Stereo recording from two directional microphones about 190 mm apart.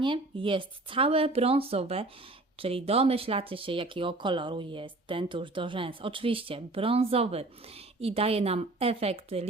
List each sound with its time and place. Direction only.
0.0 s speech: 25° right (ahead or behind)